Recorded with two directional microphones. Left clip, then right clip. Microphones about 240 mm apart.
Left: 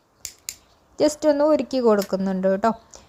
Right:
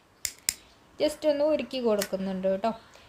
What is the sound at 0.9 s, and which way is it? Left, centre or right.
Speech, left.